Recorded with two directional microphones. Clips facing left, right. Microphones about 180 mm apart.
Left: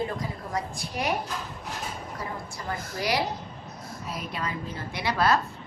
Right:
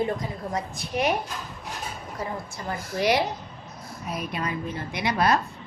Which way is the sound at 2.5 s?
20° right (ahead or behind).